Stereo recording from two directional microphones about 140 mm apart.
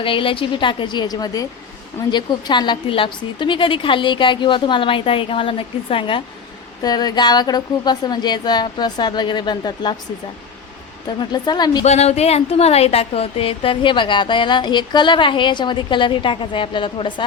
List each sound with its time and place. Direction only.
0.0 s speech: 40° left (ahead or behind)
11.3 s speech: 30° left (ahead or behind)
11.9 s speech: 50° left (ahead or behind)